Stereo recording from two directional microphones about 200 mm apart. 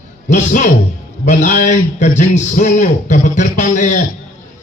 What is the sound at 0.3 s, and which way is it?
A man's voice, 40° left (ahead or behind).